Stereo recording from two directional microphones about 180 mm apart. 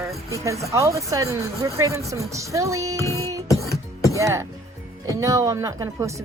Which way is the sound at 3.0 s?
15° left (ahead or behind).